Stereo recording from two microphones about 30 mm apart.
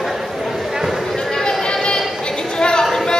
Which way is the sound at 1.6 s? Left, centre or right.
Left.